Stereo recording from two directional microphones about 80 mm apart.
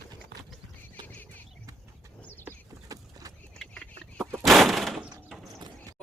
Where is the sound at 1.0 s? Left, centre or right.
Left.